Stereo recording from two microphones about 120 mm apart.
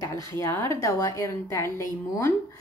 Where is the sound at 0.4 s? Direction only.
20° left (ahead or behind).